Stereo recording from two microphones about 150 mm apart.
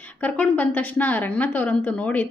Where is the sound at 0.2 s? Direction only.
10° left (ahead or behind).